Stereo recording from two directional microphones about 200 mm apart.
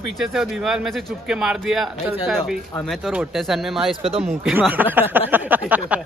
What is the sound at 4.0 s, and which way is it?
Speech, 30° right (ahead or behind).